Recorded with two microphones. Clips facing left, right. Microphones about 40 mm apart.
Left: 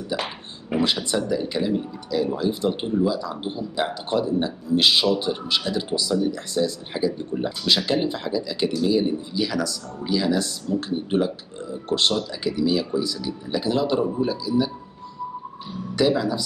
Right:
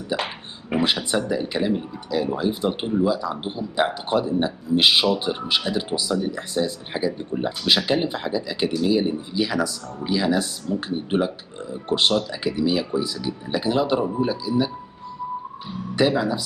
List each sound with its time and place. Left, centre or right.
0.1 s speech: centre
16.0 s speech: centre